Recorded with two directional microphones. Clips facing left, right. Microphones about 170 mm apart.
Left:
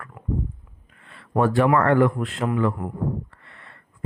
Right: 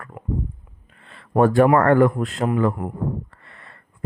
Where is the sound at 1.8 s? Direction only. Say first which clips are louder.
Right 3 dB; 45° right (ahead or behind).